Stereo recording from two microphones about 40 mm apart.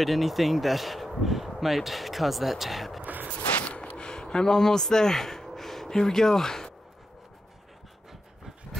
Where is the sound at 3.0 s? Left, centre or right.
Right.